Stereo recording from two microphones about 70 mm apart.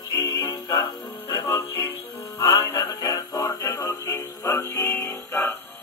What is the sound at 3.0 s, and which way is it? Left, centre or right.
Music, left.